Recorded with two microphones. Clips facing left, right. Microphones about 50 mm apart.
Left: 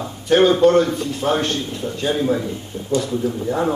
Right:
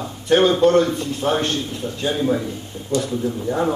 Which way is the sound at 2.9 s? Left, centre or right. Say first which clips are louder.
Left 1 dB; left.